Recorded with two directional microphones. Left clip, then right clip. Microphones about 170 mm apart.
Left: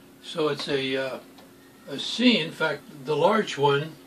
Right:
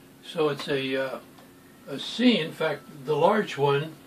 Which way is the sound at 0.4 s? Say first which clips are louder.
Even; 10° right (ahead or behind).